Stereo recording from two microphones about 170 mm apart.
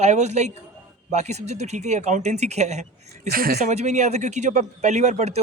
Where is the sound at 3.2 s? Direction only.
65° right (ahead or behind).